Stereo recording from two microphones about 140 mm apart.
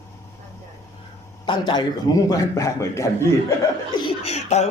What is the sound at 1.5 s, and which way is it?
A man's voice, 30° left (ahead or behind).